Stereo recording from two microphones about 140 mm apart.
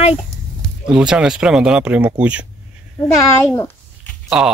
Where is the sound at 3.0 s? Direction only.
15° left (ahead or behind).